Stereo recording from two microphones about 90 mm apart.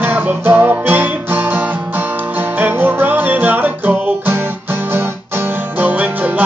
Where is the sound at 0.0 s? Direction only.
20° right (ahead or behind).